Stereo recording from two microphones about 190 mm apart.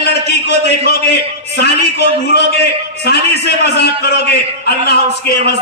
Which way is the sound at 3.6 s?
60° left (ahead or behind).